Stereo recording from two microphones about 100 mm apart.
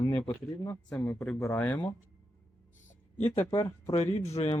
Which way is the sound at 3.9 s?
90° left.